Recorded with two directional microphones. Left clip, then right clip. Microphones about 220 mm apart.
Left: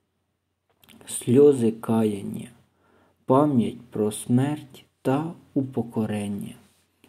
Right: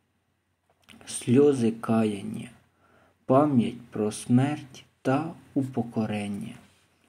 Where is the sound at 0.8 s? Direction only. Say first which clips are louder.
Left 2 dB; 20° left (ahead or behind).